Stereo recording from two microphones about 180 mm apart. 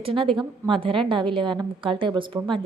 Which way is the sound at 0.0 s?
30° right (ahead or behind).